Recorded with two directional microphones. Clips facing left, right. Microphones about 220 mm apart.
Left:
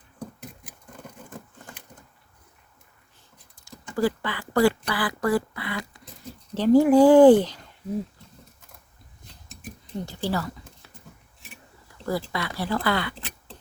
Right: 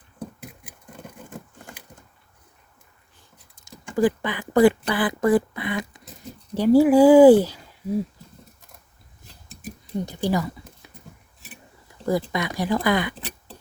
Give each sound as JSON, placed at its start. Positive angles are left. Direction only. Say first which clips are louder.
{"t": 3.5, "sound": "speech", "louder": "right 4 dB", "side_deg": -20}
{"t": 10.1, "sound": "a sound", "louder": "right 4 dB", "side_deg": -15}
{"t": 12.0, "sound": "speech", "louder": "right 4 dB", "side_deg": -20}